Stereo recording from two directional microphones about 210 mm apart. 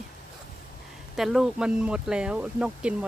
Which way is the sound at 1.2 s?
Centre (ahead or behind).